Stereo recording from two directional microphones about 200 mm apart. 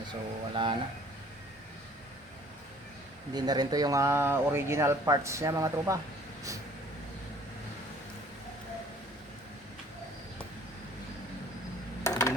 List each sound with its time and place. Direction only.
0.1 s speech: 25° right (ahead or behind)
3.3 s speech: 20° right (ahead or behind)
12.0 s a sound: 15° left (ahead or behind)